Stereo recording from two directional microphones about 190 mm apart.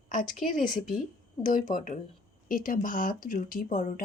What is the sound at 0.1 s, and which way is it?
Speech, 45° left (ahead or behind).